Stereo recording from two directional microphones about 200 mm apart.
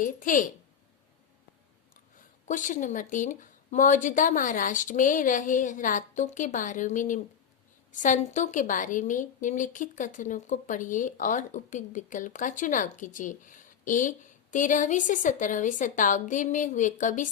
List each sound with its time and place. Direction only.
0.0 s a woman's voice: 40° left (ahead or behind)
2.5 s a woman's voice: 40° left (ahead or behind)